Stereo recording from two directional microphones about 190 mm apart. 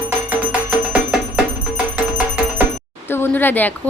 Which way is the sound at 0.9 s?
5° right (ahead or behind).